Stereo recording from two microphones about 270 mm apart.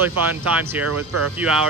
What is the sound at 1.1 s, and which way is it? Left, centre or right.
Speech, right.